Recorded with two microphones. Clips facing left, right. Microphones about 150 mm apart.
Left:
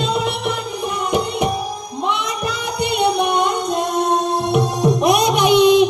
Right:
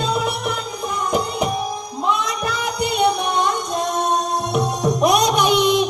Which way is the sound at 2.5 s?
30° left (ahead or behind).